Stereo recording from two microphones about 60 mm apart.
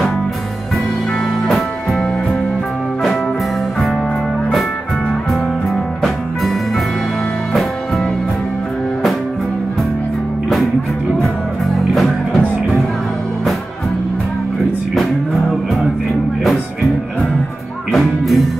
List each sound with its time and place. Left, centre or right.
1.5 s music: centre
11.9 s music: centre
15.0 s music: centre
17.9 s music: centre